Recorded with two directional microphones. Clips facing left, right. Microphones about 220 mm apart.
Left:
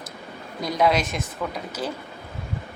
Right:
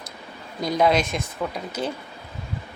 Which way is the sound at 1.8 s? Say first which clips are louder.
Right 2 dB; 25° right (ahead or behind).